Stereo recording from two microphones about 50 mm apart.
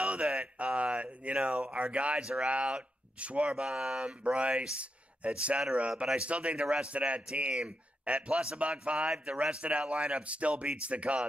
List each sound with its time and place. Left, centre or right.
0.0 s speech: right
1.8 s speech: right